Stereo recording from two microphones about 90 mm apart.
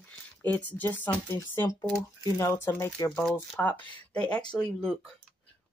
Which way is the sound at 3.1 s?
5° left (ahead or behind).